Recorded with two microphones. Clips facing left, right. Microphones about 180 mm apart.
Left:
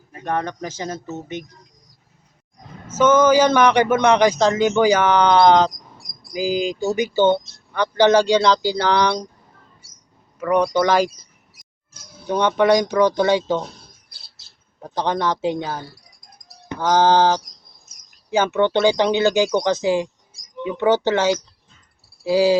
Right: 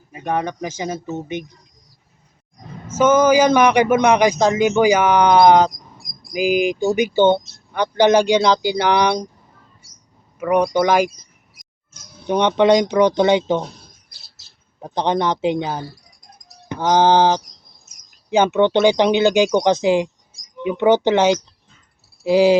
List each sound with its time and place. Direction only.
0.1 s speech: 10° right (ahead or behind)
2.9 s speech: 10° right (ahead or behind)
10.4 s speech: 15° right (ahead or behind)
12.3 s speech: 20° right (ahead or behind)
14.8 s speech: 20° right (ahead or behind)
22.2 s cricket: 20° right (ahead or behind)